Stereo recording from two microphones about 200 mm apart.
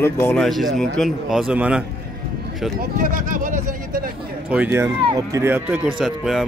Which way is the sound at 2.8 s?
45° right (ahead or behind).